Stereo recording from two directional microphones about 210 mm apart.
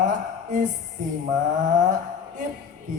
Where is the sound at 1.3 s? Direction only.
35° right (ahead or behind).